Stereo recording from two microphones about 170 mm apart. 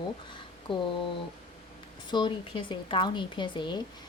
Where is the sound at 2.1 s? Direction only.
25° left (ahead or behind).